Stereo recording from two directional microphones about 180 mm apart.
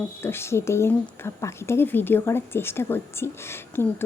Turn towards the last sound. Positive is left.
turn(degrees=15)  # may be behind; listen again after turning